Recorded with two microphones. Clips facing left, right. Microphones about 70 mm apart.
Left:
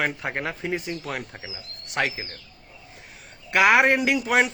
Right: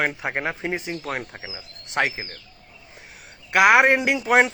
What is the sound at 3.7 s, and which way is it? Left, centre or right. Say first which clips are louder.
Speech: right 2 dB; right.